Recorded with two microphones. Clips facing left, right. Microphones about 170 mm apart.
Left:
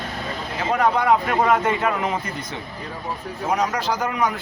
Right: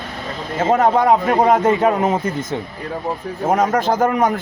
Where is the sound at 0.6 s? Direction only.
45° right (ahead or behind).